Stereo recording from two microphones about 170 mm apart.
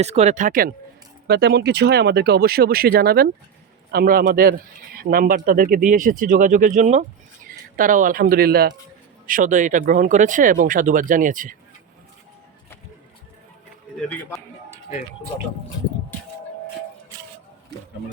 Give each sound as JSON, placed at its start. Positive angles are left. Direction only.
{"t": 0.0, "sound": "speech", "side_deg": -40}
{"t": 1.3, "sound": "speech", "side_deg": -75}
{"t": 9.2, "sound": "speech", "side_deg": -50}
{"t": 13.9, "sound": "a man's voice", "side_deg": 5}